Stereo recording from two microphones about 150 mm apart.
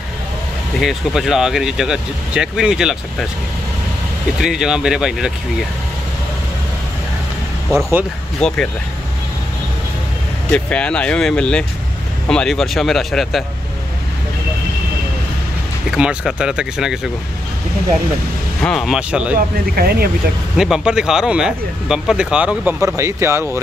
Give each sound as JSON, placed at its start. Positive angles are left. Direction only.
{"t": 0.7, "sound": "speech", "side_deg": 0}
{"t": 4.4, "sound": "speech", "side_deg": -5}
{"t": 8.4, "sound": "speech", "side_deg": 5}
{"t": 10.5, "sound": "speech", "side_deg": 5}
{"t": 15.9, "sound": "speech", "side_deg": -5}
{"t": 18.6, "sound": "speech", "side_deg": 5}
{"t": 19.3, "sound": "speech", "side_deg": -85}
{"t": 20.5, "sound": "speech", "side_deg": -5}
{"t": 22.9, "sound": "speech", "side_deg": -20}